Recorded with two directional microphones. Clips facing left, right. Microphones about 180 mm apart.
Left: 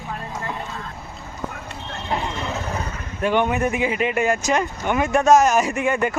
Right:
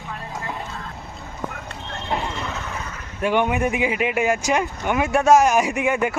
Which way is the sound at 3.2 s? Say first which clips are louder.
Even; 10° right (ahead or behind).